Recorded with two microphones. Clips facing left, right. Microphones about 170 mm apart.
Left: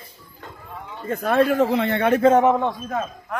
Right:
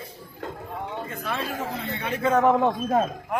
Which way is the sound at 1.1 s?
50° left (ahead or behind).